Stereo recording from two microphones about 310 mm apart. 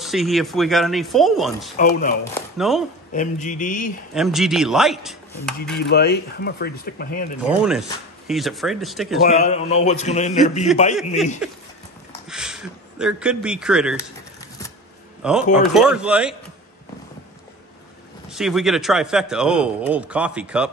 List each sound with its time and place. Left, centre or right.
0.0 s speech: centre
1.8 s a man's voice: left
2.3 s speech: centre
3.1 s a man's voice: left
4.1 s speech: centre
5.8 s speech: left
7.4 s speech: centre
9.3 s a man's voice: left
11.4 s speech: centre
15.2 s speech: centre
18.3 s speech: centre